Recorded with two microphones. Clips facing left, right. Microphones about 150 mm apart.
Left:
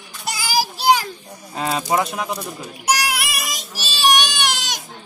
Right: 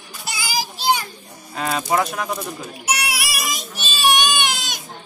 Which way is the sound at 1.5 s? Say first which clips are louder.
Left 1 dB; 25° left (ahead or behind).